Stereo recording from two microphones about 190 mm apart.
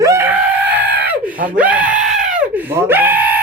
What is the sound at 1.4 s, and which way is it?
Speech, 5° right (ahead or behind).